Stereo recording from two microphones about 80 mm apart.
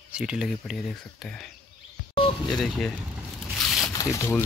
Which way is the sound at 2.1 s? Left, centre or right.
Left.